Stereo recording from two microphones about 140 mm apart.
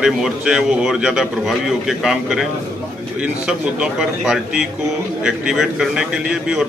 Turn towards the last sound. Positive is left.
turn(degrees=-5)  # may be behind; listen again after turning